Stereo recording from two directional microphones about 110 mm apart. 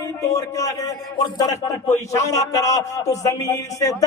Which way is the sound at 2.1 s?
30° left (ahead or behind).